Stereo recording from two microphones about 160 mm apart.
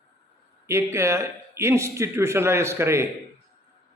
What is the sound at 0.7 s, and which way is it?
A man's voice, 15° right (ahead or behind).